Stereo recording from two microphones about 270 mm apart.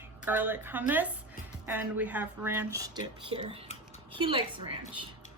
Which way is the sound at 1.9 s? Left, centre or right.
Centre.